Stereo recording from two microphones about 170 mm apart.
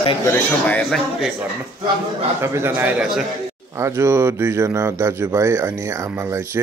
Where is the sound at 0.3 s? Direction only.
5° left (ahead or behind).